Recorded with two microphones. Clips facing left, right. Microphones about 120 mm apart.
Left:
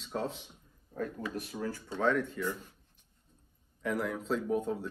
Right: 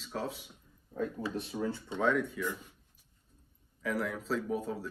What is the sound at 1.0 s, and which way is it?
Speech, 25° right (ahead or behind).